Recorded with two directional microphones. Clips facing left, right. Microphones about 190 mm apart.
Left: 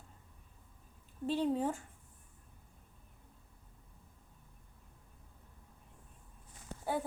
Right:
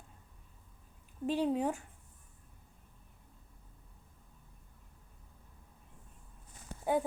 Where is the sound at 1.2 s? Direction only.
10° right (ahead or behind).